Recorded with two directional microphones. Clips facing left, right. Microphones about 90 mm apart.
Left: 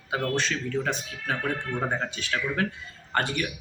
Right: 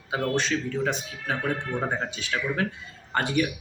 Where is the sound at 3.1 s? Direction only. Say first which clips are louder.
Right 2 dB; 10° right (ahead or behind).